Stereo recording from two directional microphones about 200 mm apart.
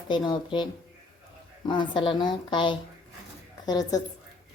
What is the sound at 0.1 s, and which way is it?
A woman's voice, 25° left (ahead or behind).